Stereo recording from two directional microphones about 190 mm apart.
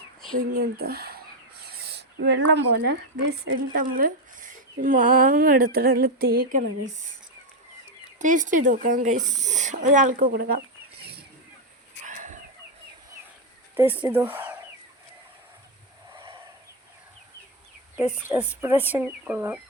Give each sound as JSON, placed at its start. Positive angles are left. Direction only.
{"t": 0.3, "sound": "speech", "side_deg": -50}
{"t": 3.8, "sound": "speech", "side_deg": -45}
{"t": 8.2, "sound": "speech", "side_deg": -40}
{"t": 12.0, "sound": "chicken", "side_deg": -40}
{"t": 13.7, "sound": "speech", "side_deg": -10}
{"t": 18.1, "sound": "speech", "side_deg": -10}